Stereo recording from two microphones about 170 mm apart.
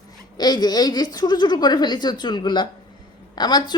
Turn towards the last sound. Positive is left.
turn(degrees=25)  # may be behind; listen again after turning